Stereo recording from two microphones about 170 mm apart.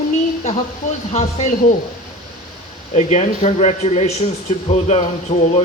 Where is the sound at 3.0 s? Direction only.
45° left (ahead or behind).